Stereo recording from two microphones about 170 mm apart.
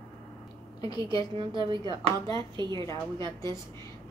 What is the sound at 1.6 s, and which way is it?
A woman's voice, 30° right (ahead or behind).